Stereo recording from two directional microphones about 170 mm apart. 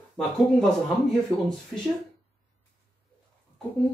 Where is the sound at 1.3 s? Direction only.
30° left (ahead or behind).